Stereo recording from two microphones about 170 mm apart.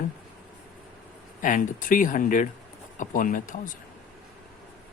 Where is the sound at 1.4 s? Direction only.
50° left (ahead or behind).